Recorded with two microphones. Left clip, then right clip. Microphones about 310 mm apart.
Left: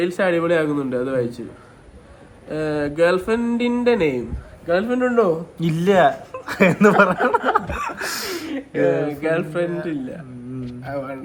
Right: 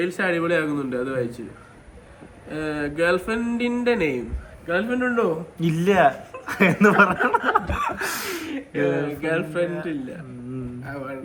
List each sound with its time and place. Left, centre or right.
0.0 s speech: centre
2.5 s speech: centre
9.2 s speech: centre